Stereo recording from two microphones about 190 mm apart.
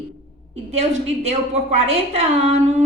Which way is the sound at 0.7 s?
35° right (ahead or behind).